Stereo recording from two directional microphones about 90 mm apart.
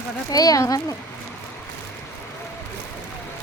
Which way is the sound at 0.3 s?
45° left (ahead or behind).